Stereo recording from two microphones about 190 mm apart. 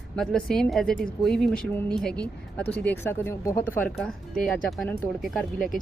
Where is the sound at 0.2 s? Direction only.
5° left (ahead or behind).